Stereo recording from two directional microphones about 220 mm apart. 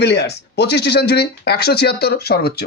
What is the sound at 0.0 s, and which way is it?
Speech, 50° left (ahead or behind).